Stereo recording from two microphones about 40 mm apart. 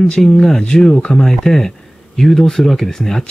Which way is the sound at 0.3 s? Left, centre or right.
Centre.